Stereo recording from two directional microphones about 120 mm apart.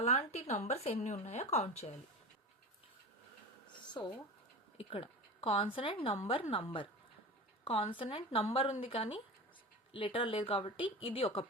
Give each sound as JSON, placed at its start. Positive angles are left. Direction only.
{"t": 0.0, "sound": "speech", "side_deg": 60}
{"t": 4.0, "sound": "speech", "side_deg": 35}
{"t": 4.8, "sound": "speech", "side_deg": 55}